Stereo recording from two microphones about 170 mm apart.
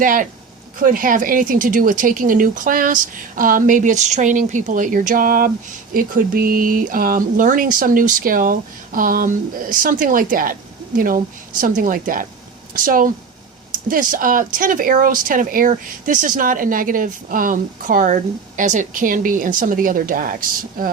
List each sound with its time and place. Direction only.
0.0 s speech: 50° right (ahead or behind)